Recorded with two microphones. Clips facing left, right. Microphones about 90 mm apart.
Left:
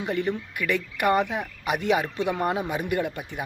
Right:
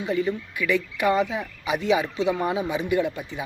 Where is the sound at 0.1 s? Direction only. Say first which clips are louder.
Right 3 dB; 65° left (ahead or behind).